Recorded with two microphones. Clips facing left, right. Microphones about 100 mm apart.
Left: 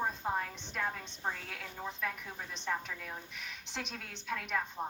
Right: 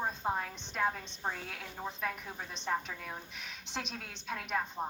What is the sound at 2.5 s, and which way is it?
Speech, 20° right (ahead or behind).